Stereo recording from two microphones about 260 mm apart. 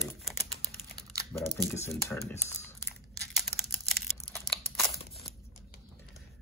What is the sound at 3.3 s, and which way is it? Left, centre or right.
Computer keyboard, centre.